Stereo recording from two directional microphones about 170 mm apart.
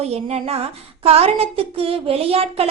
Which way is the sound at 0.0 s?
40° right (ahead or behind).